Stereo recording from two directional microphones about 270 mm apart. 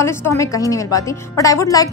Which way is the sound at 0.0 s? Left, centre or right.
Centre.